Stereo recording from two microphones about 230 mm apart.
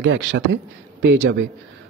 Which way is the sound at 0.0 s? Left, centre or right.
Right.